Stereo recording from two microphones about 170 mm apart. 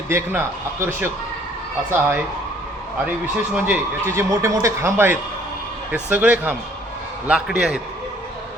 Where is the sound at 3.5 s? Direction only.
10° right (ahead or behind).